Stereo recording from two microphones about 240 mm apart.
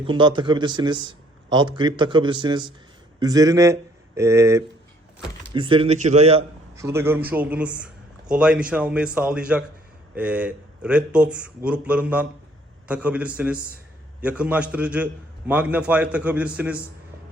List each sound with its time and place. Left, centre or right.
0.0 s speech: centre
6.7 s a man's voice: centre